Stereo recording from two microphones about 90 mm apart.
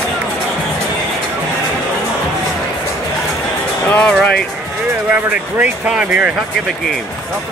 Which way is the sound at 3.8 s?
15° left (ahead or behind).